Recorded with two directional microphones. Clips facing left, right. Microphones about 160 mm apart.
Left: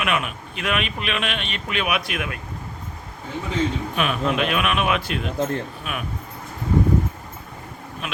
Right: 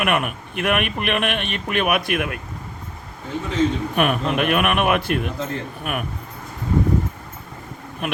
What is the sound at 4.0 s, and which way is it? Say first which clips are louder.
A man's voice: right 2 dB; 55° right (ahead or behind).